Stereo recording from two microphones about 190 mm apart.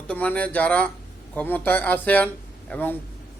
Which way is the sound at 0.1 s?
5° left (ahead or behind).